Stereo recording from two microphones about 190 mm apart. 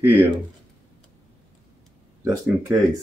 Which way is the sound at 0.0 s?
10° right (ahead or behind).